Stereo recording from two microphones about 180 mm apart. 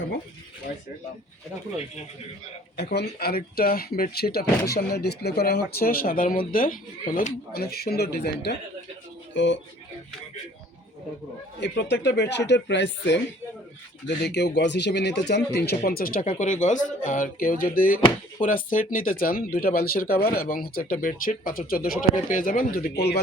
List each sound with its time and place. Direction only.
2.9 s speech: 60° left (ahead or behind)
9.3 s speech: 90° left
11.6 s speech: 70° left (ahead or behind)
14.3 s speech: 70° left (ahead or behind); by 16.3 s 50° left (ahead or behind)
16.3 s speech: 40° left (ahead or behind); by 23.2 s 60° left (ahead or behind)